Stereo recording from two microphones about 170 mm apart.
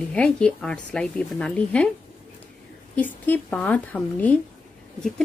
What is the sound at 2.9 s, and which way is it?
Speech, 10° left (ahead or behind).